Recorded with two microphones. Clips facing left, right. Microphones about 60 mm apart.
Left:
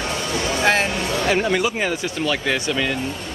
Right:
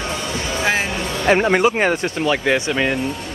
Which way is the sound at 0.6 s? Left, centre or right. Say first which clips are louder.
Left 1 dB; centre.